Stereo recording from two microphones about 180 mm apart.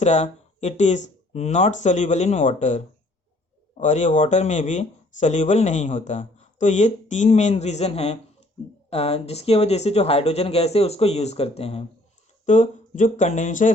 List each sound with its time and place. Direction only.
0.0 s speech: 40° left (ahead or behind)